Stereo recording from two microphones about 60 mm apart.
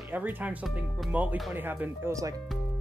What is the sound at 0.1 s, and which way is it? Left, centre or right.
Speech, right.